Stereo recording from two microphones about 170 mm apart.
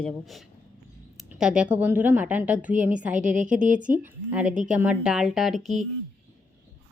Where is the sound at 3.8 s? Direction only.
50° right (ahead or behind).